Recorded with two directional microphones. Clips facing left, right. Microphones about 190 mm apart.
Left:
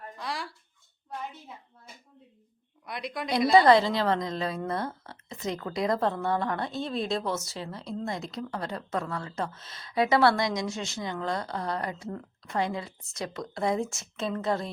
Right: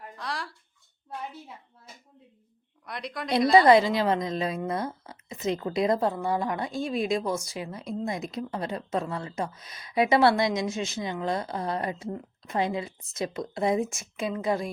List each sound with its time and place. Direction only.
0.2 s a sound: centre (ahead or behind)
2.8 s speech: centre (ahead or behind)
3.7 s speech: 15° right (ahead or behind)
6.0 s a woman's voice: 10° right (ahead or behind)